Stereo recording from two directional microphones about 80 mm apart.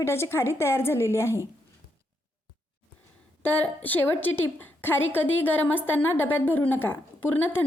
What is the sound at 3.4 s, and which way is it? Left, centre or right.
A woman's voice, left.